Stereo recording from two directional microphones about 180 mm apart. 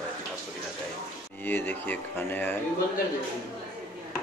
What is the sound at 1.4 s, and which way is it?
A man's voice, 10° left (ahead or behind).